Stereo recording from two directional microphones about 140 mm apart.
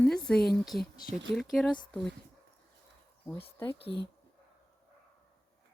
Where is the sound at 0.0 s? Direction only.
5° left (ahead or behind).